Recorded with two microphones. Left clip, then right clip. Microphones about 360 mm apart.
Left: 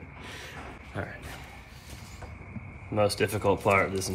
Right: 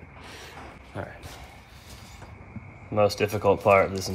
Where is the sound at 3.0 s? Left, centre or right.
Centre.